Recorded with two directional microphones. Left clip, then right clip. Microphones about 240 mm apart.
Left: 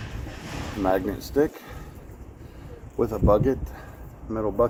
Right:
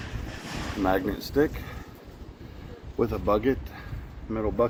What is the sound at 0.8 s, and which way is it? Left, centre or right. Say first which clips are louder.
Speech: left 2 dB; right.